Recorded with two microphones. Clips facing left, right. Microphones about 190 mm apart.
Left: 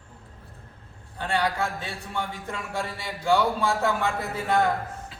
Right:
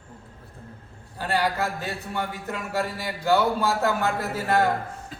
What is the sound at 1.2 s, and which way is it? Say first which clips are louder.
A man's voice: right 1 dB; 5° right (ahead or behind).